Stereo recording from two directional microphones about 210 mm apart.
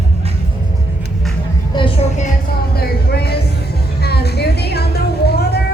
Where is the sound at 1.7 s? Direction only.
20° left (ahead or behind).